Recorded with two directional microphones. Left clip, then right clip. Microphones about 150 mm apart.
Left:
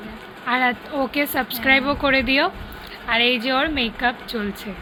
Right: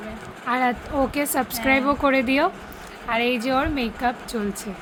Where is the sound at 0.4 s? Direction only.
20° right (ahead or behind).